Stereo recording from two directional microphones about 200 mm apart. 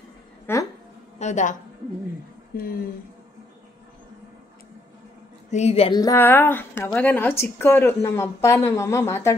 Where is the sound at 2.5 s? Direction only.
50° left (ahead or behind).